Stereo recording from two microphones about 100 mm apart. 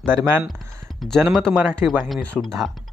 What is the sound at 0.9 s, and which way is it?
Speech, 5° left (ahead or behind).